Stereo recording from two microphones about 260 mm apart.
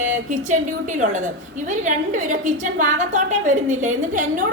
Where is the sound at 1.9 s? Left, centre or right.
Right.